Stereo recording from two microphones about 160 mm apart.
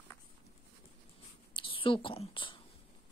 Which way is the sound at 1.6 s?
30° left (ahead or behind).